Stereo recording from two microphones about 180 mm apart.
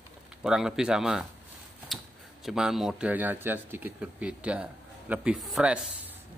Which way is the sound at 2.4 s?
5° right (ahead or behind).